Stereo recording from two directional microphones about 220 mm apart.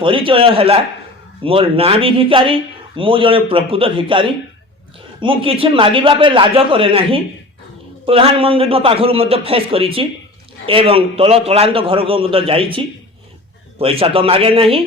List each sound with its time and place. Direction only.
0.0 s speech: 25° right (ahead or behind)